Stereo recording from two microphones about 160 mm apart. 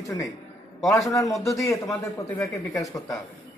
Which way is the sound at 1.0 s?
20° left (ahead or behind).